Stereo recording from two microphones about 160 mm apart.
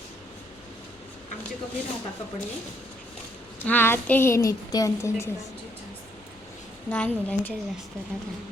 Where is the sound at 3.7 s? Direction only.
10° left (ahead or behind).